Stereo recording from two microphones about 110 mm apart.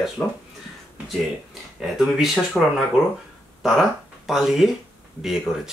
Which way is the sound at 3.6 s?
Centre (ahead or behind).